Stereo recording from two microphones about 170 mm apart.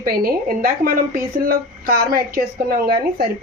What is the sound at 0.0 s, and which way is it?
Speech, 60° right (ahead or behind).